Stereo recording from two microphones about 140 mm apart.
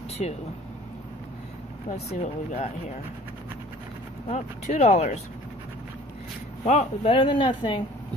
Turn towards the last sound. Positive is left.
turn(degrees=35)  # may be behind; listen again after turning